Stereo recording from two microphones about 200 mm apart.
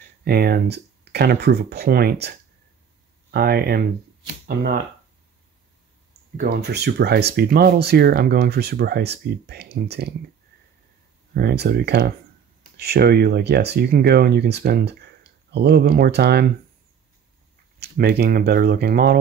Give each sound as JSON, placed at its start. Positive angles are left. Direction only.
{"t": 0.2, "sound": "speech", "side_deg": -50}
{"t": 6.3, "sound": "speech", "side_deg": -50}
{"t": 11.3, "sound": "speech", "side_deg": -50}
{"t": 17.7, "sound": "speech", "side_deg": -50}